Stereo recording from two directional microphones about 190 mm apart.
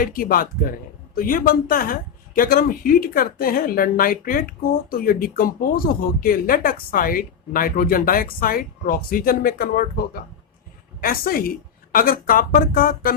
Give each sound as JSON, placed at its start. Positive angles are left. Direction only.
{"t": 0.0, "sound": "speech", "side_deg": 50}
{"t": 11.0, "sound": "speech", "side_deg": 50}